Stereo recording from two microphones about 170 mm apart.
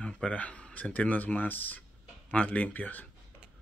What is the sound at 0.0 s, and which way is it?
Speech, 5° left (ahead or behind).